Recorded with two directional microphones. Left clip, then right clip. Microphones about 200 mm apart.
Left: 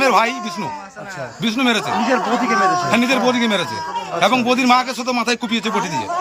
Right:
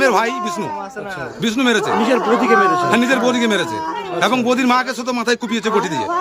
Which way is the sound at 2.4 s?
40° right (ahead or behind).